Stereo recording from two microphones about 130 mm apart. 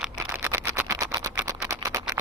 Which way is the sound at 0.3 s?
20° right (ahead or behind).